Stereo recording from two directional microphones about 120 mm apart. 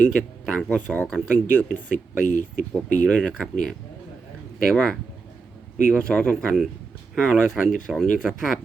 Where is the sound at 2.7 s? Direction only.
10° left (ahead or behind).